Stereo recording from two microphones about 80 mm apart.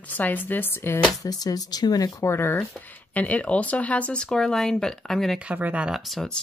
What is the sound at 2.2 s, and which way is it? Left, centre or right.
Speech, left.